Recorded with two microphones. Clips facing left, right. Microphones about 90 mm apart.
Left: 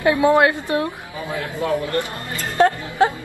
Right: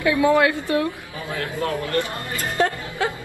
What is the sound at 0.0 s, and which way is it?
Speech, 30° left (ahead or behind).